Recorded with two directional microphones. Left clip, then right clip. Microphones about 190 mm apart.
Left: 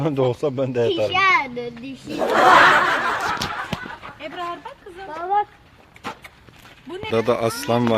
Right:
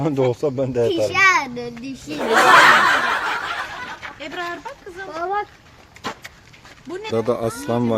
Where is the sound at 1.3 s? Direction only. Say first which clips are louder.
Right 1 dB; 75° right (ahead or behind).